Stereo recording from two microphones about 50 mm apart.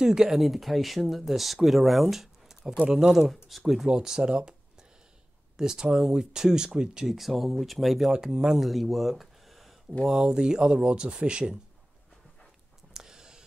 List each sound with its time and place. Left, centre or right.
0.0 s speech: centre
0.4 s speech: centre
3.4 s speech: centre
5.6 s speech: centre
7.1 s speech: centre
8.1 s speech: centre
8.5 s speech: centre
10.0 s speech: centre
12.9 s a sound: centre